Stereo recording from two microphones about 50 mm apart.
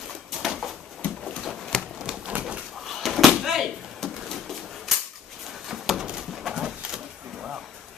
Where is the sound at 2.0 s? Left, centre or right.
Centre.